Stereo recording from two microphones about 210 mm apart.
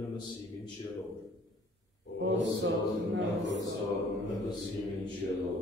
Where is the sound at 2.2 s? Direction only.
60° right (ahead or behind).